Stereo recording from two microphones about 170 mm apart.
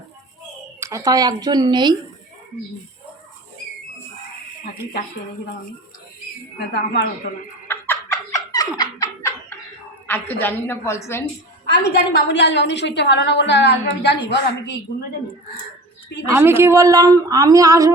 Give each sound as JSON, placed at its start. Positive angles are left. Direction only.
{"t": 0.8, "sound": "a woman's voice", "side_deg": -20}
{"t": 6.6, "sound": "a woman's voice", "side_deg": 90}
{"t": 7.7, "sound": "a sound", "side_deg": 15}
{"t": 10.1, "sound": "a woman's voice", "side_deg": 10}
{"t": 11.6, "sound": "a woman's voice", "side_deg": 80}
{"t": 16.3, "sound": "a woman's voice", "side_deg": -10}